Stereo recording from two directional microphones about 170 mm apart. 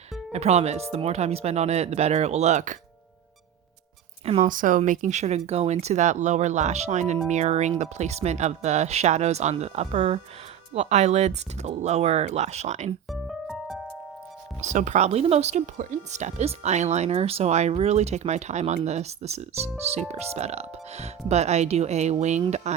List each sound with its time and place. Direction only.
0.3 s speech: 40° right (ahead or behind)
4.4 s speech: 50° right (ahead or behind)
13.1 s music: centre (ahead or behind)
14.6 s speech: 45° right (ahead or behind)